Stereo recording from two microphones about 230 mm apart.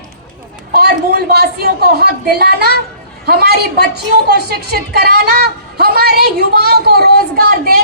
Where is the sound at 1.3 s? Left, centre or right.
Right.